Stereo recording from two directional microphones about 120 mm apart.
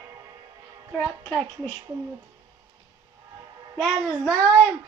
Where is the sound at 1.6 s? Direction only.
30° right (ahead or behind).